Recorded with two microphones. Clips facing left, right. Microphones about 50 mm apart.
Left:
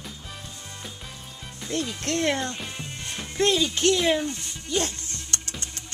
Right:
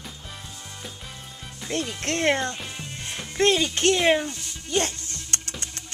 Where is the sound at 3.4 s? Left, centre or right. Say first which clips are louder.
Right 1 dB; right.